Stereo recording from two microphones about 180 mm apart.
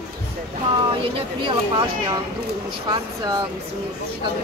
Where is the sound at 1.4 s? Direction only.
25° right (ahead or behind).